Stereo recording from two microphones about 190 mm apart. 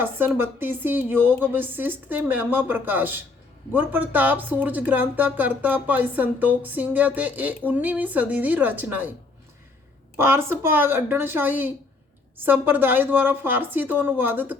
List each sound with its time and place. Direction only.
0.0 s speech: 10° right (ahead or behind)
10.2 s speech: 10° right (ahead or behind)